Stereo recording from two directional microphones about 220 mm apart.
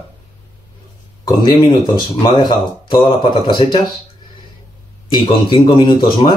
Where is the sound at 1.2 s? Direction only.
20° left (ahead or behind).